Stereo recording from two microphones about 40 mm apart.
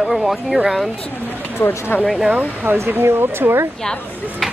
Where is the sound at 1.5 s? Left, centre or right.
Left.